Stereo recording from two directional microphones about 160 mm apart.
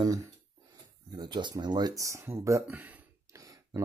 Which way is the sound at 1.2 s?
30° right (ahead or behind).